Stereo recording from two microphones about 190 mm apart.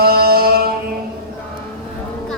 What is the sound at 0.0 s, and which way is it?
Music, 55° right (ahead or behind).